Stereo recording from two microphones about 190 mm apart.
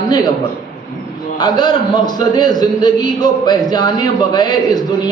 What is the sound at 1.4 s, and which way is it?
A man's voice, 20° left (ahead or behind).